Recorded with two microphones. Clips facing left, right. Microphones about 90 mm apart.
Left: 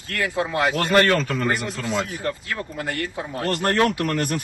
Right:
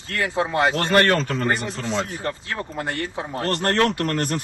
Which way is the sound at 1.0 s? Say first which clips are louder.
Even; 40° right (ahead or behind).